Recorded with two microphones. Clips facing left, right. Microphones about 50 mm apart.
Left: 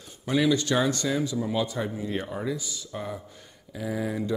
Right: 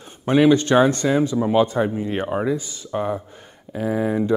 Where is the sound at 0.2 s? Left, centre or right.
Right.